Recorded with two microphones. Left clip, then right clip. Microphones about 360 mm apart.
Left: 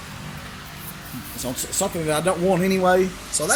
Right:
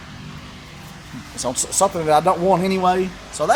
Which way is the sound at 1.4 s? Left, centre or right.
Right.